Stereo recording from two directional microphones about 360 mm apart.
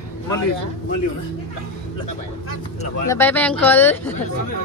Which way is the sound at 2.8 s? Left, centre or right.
Centre.